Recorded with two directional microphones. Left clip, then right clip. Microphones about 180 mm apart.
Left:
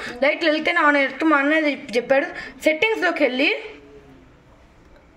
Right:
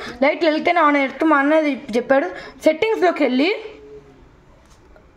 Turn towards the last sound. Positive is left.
turn(degrees=-55)  # may be behind; listen again after turning